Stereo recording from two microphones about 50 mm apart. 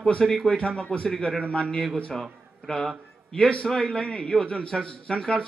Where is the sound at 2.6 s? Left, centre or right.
Centre.